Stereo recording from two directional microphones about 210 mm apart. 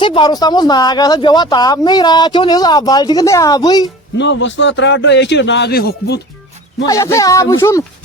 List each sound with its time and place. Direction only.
0.0 s speech: 25° left (ahead or behind)
4.2 s a man's voice: 60° left (ahead or behind)
6.8 s speech: 15° left (ahead or behind)